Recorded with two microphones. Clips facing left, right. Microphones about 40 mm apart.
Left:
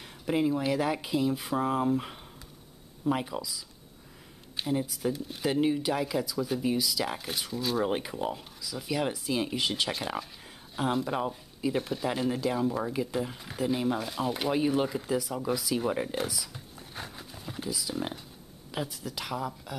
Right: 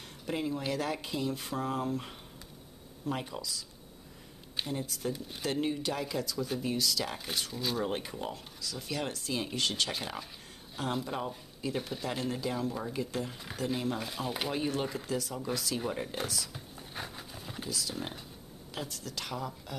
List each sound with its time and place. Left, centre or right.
0.3 s speech: centre
4.7 s speech: centre
7.8 s speech: centre
15.9 s speech: centre
16.2 s a sound: centre
17.6 s speech: centre